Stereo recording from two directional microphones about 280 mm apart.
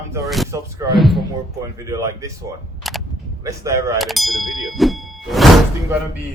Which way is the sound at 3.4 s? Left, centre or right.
Centre.